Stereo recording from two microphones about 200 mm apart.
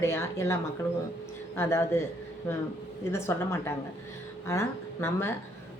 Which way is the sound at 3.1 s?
15° left (ahead or behind).